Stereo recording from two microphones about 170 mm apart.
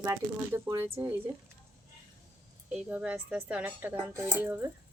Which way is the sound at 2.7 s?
5° right (ahead or behind).